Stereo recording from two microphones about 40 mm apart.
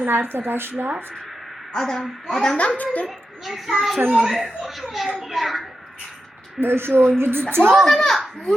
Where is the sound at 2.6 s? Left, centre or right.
Left.